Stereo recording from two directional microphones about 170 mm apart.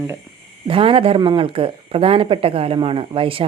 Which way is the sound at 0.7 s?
30° right (ahead or behind).